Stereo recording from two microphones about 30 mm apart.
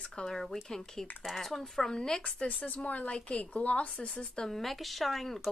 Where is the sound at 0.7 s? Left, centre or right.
Centre.